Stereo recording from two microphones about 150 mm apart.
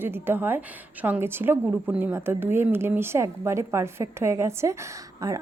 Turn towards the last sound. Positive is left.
turn(degrees=-20)  # may be behind; listen again after turning